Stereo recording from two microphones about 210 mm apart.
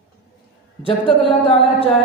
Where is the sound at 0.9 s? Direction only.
25° left (ahead or behind).